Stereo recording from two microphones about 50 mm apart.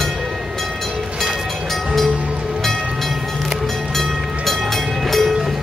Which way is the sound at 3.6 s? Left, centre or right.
Centre.